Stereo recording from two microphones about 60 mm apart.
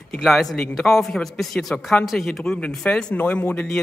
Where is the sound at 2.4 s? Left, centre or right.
Centre.